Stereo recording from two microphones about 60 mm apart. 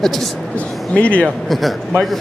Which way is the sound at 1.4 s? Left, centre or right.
Centre.